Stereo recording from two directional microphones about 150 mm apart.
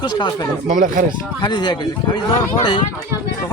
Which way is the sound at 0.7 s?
60° right (ahead or behind).